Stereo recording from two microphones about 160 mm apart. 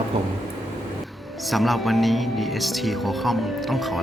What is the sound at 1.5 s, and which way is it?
Speech, centre (ahead or behind).